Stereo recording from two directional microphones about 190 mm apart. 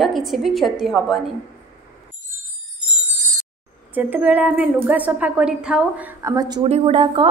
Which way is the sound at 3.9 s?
10° right (ahead or behind).